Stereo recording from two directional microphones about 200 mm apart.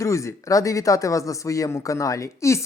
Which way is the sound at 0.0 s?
15° left (ahead or behind).